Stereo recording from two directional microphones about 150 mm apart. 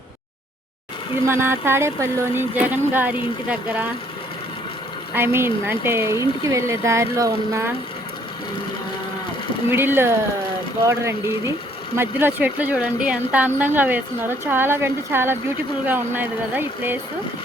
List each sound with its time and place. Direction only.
1.2 s speech: 15° right (ahead or behind)
5.1 s speech: 15° right (ahead or behind)
9.6 s speech: 15° right (ahead or behind)
11.9 s speech: 15° right (ahead or behind)